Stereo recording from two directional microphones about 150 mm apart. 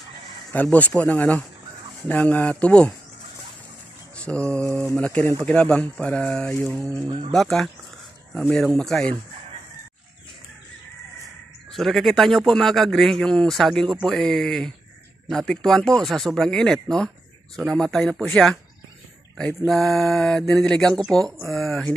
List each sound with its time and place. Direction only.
0.5 s speech: 10° left (ahead or behind)
4.2 s a man's voice: 5° left (ahead or behind)
7.1 s speech: 35° right (ahead or behind)
7.3 s a man's voice: centre (ahead or behind)
11.7 s a man's voice: centre (ahead or behind)